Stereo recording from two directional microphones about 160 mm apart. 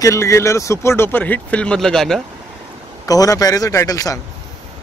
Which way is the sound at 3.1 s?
20° left (ahead or behind).